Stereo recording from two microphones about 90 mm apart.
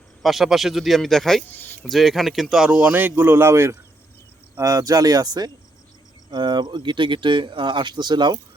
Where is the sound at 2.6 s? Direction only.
15° right (ahead or behind).